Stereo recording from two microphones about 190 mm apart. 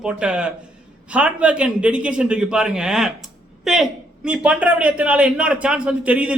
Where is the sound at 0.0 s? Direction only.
5° right (ahead or behind).